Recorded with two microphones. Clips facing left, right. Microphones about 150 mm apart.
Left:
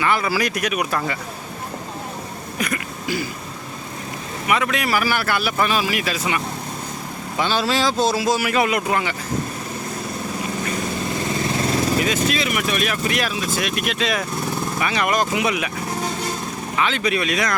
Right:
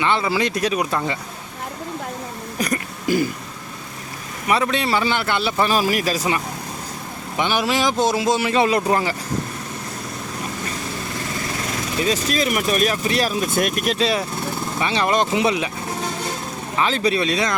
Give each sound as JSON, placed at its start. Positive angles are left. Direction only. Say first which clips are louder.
{"t": 0.0, "sound": "a man's voice", "louder": "right 1 dB", "side_deg": -25}
{"t": 2.6, "sound": "throat clearing", "louder": "right 2 dB", "side_deg": -40}
{"t": 4.4, "sound": "a man's voice", "louder": "right 1 dB", "side_deg": -30}
{"t": 5.7, "sound": "speech", "louder": "right 3 dB", "side_deg": -40}
{"t": 7.3, "sound": "a man's voice", "louder": "even", "side_deg": -15}
{"t": 12.0, "sound": "speech", "louder": "right 1 dB", "side_deg": -40}
{"t": 13.3, "sound": "a man's voice", "louder": "right 3 dB", "side_deg": -50}
{"t": 16.7, "sound": "speech", "louder": "right 2 dB", "side_deg": -35}